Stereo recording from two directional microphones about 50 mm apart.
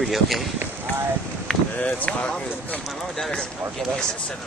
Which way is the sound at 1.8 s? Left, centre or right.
Left.